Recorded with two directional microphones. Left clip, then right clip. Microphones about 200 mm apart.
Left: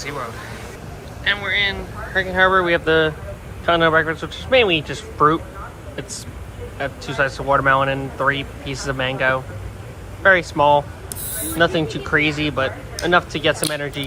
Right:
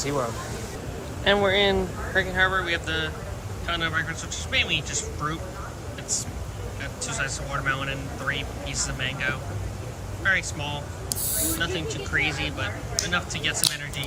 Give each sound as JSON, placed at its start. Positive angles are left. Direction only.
{"t": 0.0, "sound": "speech", "side_deg": -20}
{"t": 2.1, "sound": "speech", "side_deg": 5}
{"t": 6.7, "sound": "speech", "side_deg": 15}